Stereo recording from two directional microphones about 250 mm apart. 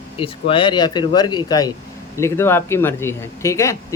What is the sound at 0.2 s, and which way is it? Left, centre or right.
Speech, left.